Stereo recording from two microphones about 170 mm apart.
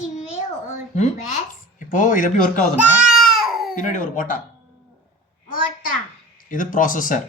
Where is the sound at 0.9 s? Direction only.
45° left (ahead or behind).